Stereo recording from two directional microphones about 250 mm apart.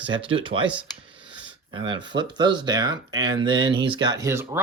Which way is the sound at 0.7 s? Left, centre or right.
Centre.